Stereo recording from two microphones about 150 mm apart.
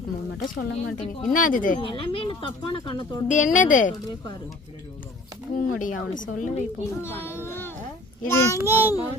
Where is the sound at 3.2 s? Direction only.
55° left (ahead or behind).